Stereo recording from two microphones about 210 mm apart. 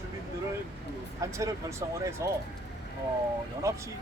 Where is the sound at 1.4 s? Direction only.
15° right (ahead or behind).